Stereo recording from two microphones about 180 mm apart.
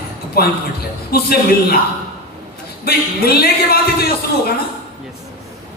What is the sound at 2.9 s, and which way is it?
Speech, 60° left (ahead or behind).